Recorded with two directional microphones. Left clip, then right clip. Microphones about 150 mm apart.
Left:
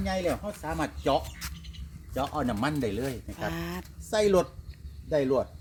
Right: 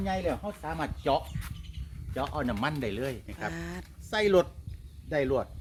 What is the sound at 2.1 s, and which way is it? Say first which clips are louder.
Speech: left 2 dB; 5° left (ahead or behind).